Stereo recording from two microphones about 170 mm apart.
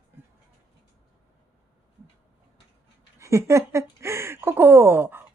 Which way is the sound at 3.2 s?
15° right (ahead or behind).